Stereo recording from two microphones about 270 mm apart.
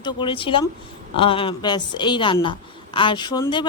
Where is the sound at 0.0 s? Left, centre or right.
Centre.